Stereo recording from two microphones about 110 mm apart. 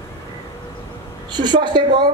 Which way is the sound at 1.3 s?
45° right (ahead or behind).